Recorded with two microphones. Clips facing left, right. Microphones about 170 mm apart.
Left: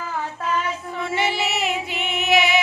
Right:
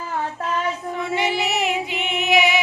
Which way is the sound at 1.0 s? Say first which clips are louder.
Right 1 dB; 15° right (ahead or behind).